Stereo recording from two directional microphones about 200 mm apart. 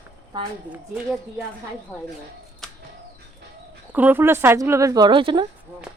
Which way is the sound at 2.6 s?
Centre (ahead or behind).